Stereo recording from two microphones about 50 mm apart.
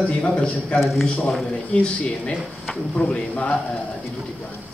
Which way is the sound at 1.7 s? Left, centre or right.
Centre.